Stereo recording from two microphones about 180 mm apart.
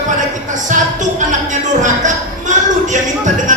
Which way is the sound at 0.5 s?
45° right (ahead or behind).